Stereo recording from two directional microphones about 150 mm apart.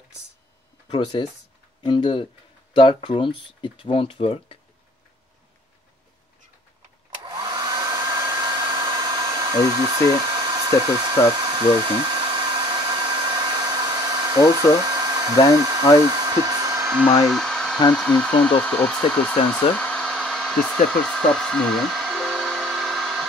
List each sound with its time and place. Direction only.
0.8 s speech: 35° left (ahead or behind)
7.2 s hair dryer: 30° right (ahead or behind)
15.5 s speech: 25° right (ahead or behind)
16.0 s hair dryer: 25° right (ahead or behind)
17.3 s hair dryer: centre (ahead or behind)
17.9 s speech: 5° left (ahead or behind)
19.7 s hair dryer: 10° left (ahead or behind)